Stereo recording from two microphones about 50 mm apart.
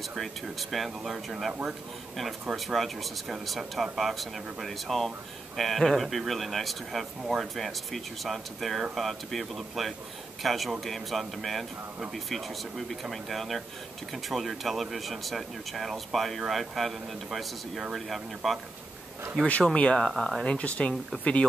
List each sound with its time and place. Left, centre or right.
0.1 s speech: centre
2.5 s speech: centre
19.7 s speech: left
20.0 s speech: centre
20.4 s speech: left